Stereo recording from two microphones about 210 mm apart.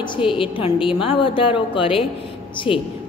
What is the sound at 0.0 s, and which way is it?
A woman's voice, 25° left (ahead or behind).